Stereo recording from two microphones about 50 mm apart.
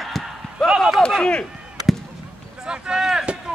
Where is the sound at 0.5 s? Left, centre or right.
Centre.